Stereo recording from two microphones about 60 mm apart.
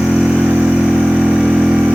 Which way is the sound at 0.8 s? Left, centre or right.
Centre.